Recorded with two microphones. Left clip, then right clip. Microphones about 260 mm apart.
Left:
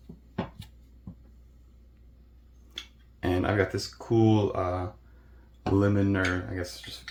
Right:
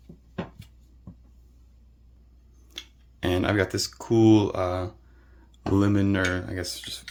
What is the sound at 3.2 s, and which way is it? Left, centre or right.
Speech, right.